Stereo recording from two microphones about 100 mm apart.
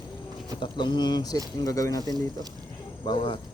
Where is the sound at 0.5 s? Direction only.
50° left (ahead or behind); by 2.0 s 35° left (ahead or behind).